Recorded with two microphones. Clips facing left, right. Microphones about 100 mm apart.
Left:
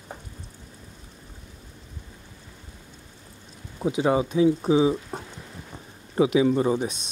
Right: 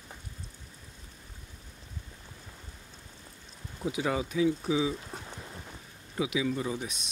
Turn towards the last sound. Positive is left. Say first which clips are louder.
# left 10 dB
turn(degrees=35)  # may be behind; listen again after turning